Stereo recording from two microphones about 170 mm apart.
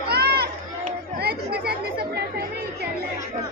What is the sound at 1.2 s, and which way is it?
Chatter, 65° right (ahead or behind).